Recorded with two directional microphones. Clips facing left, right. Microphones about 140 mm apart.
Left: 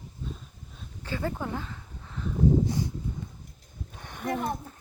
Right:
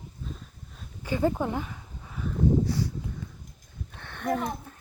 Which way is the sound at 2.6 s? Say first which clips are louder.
Even; 20° left (ahead or behind).